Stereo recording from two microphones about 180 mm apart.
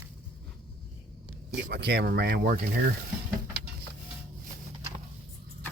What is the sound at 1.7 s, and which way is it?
Speech, 65° right (ahead or behind).